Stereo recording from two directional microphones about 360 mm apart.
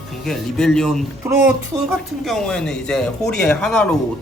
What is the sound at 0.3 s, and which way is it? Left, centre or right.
Speech, centre.